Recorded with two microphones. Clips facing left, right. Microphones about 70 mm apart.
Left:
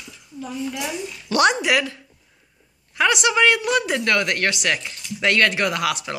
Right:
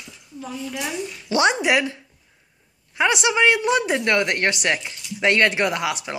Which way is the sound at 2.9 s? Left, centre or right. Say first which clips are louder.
Left 1 dB; right.